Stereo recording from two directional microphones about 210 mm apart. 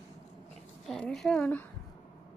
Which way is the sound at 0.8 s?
Centre (ahead or behind).